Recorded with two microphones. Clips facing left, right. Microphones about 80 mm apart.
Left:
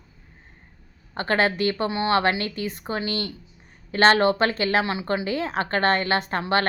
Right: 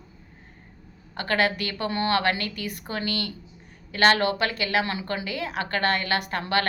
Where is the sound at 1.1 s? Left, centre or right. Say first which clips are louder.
Left 2 dB; left.